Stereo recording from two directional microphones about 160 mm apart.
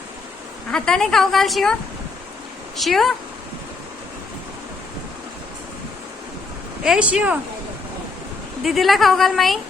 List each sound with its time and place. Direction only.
0.7 s a woman's voice: 5° left (ahead or behind)
2.7 s a woman's voice: centre (ahead or behind)
6.8 s speech: 5° right (ahead or behind)
8.6 s a woman's voice: centre (ahead or behind)